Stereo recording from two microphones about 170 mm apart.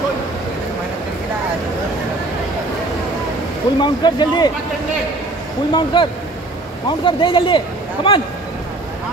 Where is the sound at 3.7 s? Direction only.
25° left (ahead or behind).